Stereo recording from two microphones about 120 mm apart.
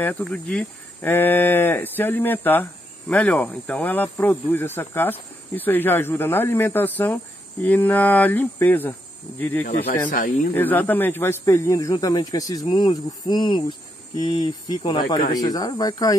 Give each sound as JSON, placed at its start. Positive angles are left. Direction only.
{"t": 0.0, "sound": "speech", "side_deg": 10}
{"t": 12.6, "sound": "cricket", "side_deg": 35}